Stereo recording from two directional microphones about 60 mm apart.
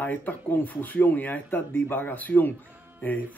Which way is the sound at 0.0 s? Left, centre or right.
Left.